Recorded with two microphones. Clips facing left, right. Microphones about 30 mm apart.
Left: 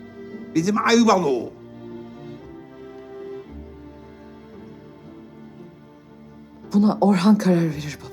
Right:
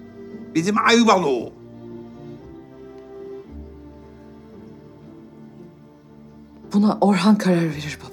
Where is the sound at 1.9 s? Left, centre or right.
Left.